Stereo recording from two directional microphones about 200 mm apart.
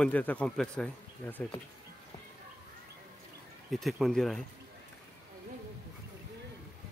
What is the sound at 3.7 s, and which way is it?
Speech, centre (ahead or behind).